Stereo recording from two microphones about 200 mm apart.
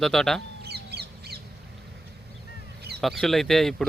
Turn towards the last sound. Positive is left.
turn(degrees=0)  # may be behind; listen again after turning